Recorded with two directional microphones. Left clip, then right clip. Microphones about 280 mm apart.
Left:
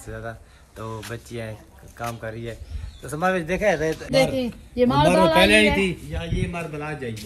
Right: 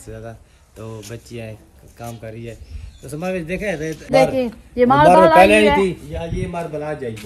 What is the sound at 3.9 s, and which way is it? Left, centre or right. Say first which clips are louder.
Speech: right 5 dB; centre.